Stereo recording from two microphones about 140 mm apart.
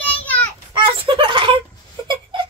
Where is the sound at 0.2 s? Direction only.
10° left (ahead or behind).